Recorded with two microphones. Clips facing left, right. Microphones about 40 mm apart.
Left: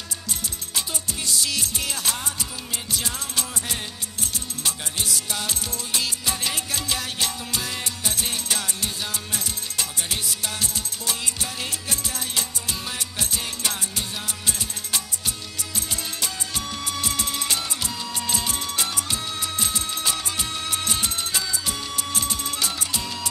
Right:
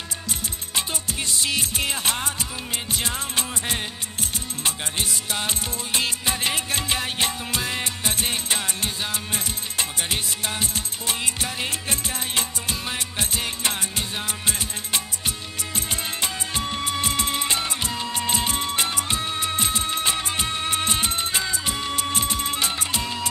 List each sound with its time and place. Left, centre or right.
0.7 s music: right